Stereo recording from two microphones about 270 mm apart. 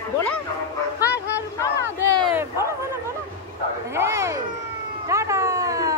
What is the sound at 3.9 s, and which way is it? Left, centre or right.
Dog, centre.